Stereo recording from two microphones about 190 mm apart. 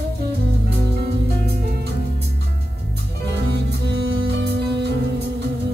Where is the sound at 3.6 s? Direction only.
60° right (ahead or behind).